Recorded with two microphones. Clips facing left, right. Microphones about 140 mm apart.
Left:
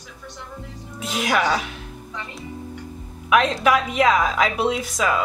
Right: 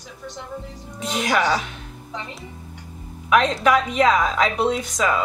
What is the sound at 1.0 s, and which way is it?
Speech, 5° left (ahead or behind).